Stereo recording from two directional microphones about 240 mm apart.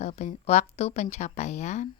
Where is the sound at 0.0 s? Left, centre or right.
Left.